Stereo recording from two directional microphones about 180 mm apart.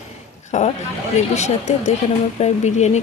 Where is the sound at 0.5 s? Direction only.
40° left (ahead or behind).